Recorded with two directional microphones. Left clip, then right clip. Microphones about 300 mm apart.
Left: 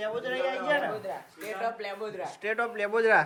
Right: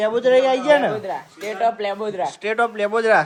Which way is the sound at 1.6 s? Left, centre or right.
Right.